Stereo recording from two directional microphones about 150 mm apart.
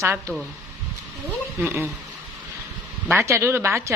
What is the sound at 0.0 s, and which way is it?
Speech, 20° right (ahead or behind).